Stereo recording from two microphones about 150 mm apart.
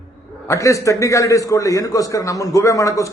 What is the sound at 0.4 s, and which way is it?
A man's voice, 20° left (ahead or behind).